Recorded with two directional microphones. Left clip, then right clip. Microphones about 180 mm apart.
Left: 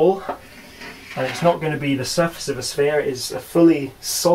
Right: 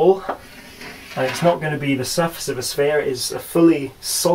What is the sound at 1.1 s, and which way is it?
Speech, centre (ahead or behind).